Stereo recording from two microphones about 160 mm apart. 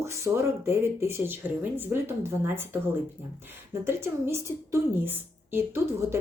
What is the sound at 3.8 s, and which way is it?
A woman's voice, 15° right (ahead or behind).